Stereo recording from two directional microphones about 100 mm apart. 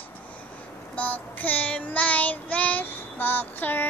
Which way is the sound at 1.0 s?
15° left (ahead or behind).